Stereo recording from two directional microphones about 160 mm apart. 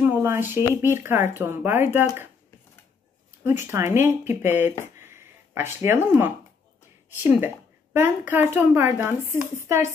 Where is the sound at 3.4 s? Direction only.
15° right (ahead or behind).